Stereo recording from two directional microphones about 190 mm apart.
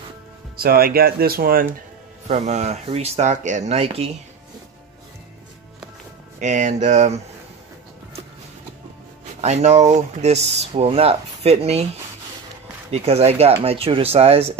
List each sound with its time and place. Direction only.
0.6 s speech: 50° right (ahead or behind)
2.2 s speech: 35° right (ahead or behind)
6.4 s speech: 40° right (ahead or behind)
9.4 s speech: 35° right (ahead or behind)
12.9 s speech: 35° right (ahead or behind)